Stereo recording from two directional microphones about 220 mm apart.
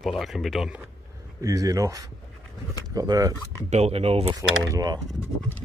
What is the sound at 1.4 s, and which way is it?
Speech, 15° right (ahead or behind).